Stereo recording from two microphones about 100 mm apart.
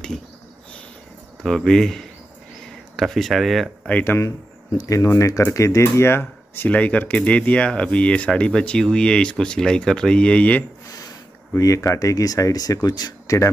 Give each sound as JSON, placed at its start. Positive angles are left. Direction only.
{"t": 1.4, "sound": "speech", "side_deg": 5}
{"t": 4.0, "sound": "speech", "side_deg": 20}
{"t": 4.7, "sound": "speech", "side_deg": 35}
{"t": 11.5, "sound": "speech", "side_deg": 30}